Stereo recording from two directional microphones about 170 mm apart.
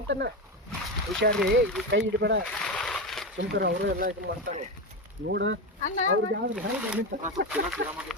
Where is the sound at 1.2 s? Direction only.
70° right (ahead or behind).